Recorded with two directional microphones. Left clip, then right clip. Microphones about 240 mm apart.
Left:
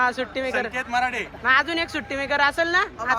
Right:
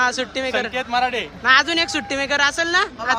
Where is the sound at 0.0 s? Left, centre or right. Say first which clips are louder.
Right 3 dB; centre.